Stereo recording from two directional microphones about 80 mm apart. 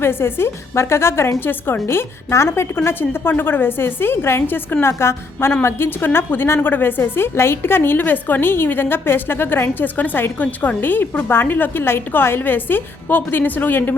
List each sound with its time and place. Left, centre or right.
0.0 s a woman's voice: left